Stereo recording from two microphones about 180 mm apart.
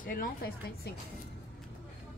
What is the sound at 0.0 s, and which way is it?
Speech, 50° left (ahead or behind).